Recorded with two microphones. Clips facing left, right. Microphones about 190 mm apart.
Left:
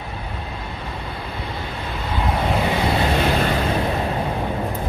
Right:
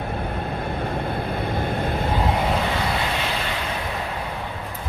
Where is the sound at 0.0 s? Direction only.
55° right (ahead or behind).